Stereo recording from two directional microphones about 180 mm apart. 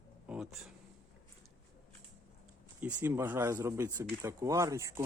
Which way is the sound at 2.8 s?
10° right (ahead or behind).